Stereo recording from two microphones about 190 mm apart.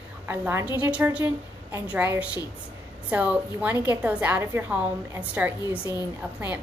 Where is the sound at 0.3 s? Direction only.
10° right (ahead or behind).